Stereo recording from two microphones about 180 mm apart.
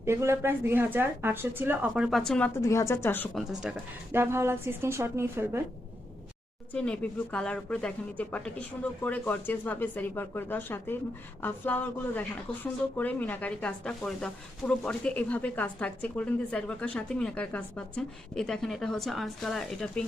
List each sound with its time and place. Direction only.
0.0 s a woman's voice: 15° right (ahead or behind); by 2.5 s 5° left (ahead or behind)
2.6 s speech: 15° left (ahead or behind)
3.3 s a woman's voice: 5° right (ahead or behind)
6.7 s a woman's voice: 5° left (ahead or behind)